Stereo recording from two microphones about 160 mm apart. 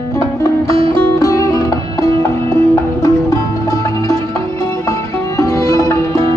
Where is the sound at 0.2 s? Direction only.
20° left (ahead or behind).